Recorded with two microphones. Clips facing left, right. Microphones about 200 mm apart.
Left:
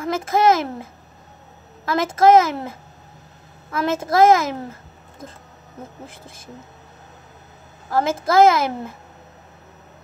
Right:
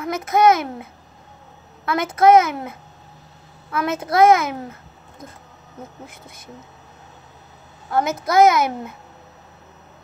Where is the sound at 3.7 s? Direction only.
25° left (ahead or behind).